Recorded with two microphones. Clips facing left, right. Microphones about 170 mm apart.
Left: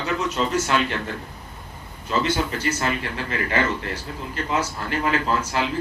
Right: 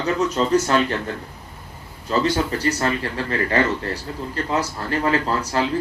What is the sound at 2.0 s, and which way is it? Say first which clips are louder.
Speech: right 3 dB; 40° right (ahead or behind).